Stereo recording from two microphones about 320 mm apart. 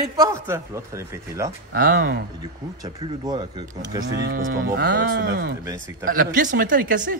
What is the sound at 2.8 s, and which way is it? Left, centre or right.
A man's voice, centre.